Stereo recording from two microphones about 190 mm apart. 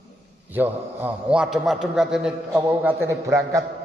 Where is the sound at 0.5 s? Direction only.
10° right (ahead or behind).